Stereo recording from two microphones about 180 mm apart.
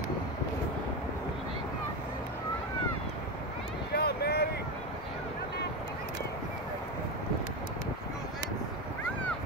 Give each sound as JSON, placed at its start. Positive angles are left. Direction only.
{"t": 3.9, "sound": "vehicle", "side_deg": 60}